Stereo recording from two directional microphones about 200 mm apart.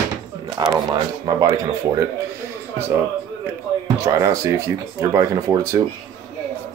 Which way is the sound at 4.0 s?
15° right (ahead or behind).